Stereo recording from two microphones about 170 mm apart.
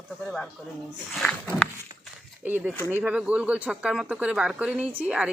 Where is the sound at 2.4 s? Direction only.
10° right (ahead or behind).